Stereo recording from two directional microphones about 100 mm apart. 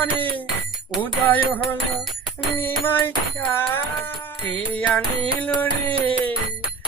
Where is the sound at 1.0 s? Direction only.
20° left (ahead or behind).